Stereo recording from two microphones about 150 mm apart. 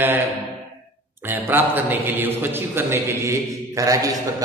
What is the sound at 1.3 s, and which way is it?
A man's voice, 10° right (ahead or behind).